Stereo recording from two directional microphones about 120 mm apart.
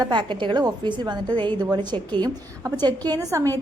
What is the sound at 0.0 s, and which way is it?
A woman's voice, 40° right (ahead or behind).